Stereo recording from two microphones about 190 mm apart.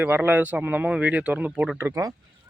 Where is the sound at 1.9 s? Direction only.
20° right (ahead or behind).